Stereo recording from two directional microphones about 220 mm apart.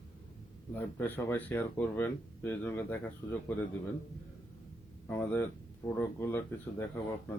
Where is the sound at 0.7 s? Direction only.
10° left (ahead or behind).